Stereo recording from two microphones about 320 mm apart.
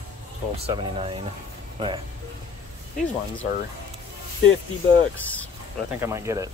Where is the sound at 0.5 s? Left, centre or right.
Centre.